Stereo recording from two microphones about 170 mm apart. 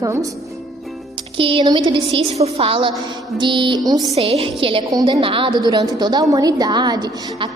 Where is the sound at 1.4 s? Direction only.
30° right (ahead or behind).